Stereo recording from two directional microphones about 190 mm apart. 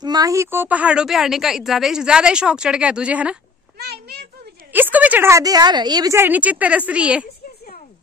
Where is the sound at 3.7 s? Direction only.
55° right (ahead or behind).